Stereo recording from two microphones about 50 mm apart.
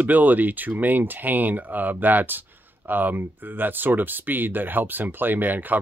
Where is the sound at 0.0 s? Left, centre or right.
Right.